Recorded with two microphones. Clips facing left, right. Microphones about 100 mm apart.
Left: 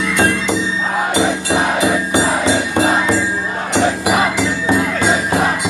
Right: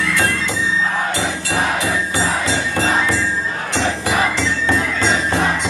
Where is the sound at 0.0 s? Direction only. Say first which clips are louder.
Left 3 dB; 20° left (ahead or behind).